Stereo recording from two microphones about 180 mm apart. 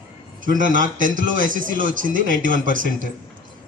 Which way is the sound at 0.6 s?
45° right (ahead or behind).